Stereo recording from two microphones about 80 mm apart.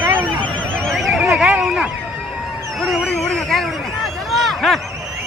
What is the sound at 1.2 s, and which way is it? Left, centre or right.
Horse, centre.